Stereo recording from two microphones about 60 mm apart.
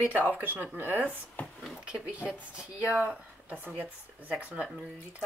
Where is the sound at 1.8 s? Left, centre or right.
Centre.